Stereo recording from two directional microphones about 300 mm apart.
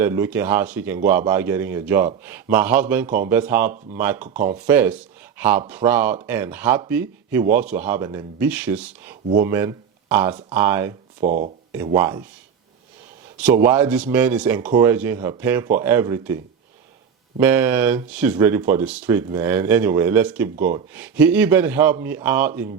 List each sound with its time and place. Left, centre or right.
0.0 s a man's voice: centre
11.2 s speech: right
11.9 s a man's voice: centre
13.4 s a man's voice: centre